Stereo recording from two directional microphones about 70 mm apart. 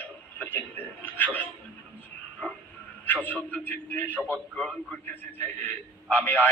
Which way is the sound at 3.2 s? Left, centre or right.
Left.